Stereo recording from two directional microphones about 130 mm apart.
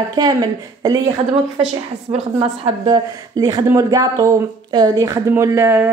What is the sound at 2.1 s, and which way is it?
Speech, 45° right (ahead or behind).